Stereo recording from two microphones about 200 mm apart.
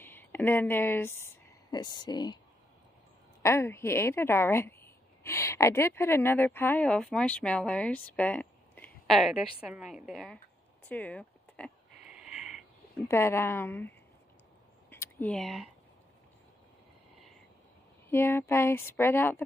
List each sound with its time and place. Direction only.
0.0 s speech: 10° left (ahead or behind)
3.4 s a woman's voice: 15° left (ahead or behind)
12.1 s a sound: 5° right (ahead or behind)
13.1 s a woman's voice: 10° left (ahead or behind)
14.9 s a sound: 10° left (ahead or behind)
18.1 s a woman's voice: 10° left (ahead or behind)